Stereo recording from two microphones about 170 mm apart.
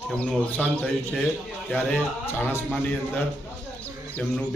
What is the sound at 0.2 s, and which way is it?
A man's voice, 10° left (ahead or behind).